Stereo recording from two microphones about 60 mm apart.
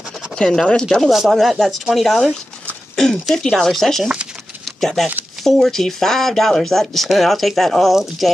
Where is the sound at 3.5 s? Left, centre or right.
Centre.